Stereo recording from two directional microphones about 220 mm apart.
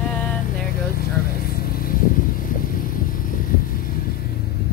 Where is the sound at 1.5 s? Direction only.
40° left (ahead or behind).